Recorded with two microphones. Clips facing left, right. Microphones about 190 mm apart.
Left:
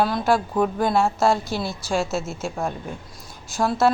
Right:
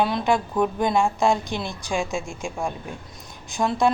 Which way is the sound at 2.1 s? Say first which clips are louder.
Left 2 dB; 15° right (ahead or behind).